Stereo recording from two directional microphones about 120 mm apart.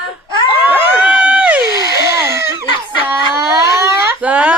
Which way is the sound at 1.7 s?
30° right (ahead or behind).